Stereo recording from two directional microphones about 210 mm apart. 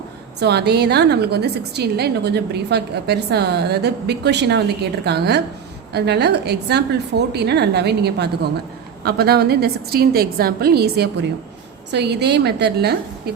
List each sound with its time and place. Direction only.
0.3 s a woman's voice: 50° right (ahead or behind)